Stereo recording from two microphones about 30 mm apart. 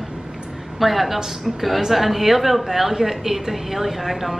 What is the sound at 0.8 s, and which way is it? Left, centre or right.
A woman's voice, centre.